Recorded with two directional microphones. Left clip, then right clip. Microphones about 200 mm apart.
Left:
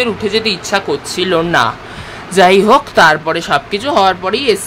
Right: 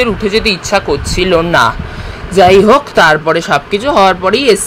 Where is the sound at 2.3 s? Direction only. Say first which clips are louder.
Right 2 dB; centre (ahead or behind).